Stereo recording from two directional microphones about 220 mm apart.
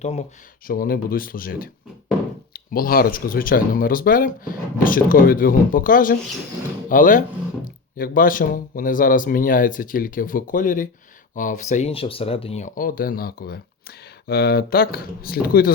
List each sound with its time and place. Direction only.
0.0 s speech: 30° left (ahead or behind)
0.7 s speech: 40° left (ahead or behind)